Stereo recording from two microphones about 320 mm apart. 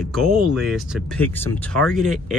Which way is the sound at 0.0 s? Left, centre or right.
Centre.